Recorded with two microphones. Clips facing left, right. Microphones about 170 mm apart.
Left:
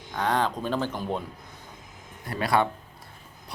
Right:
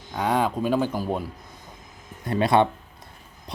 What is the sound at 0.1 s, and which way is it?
Speech, 10° right (ahead or behind).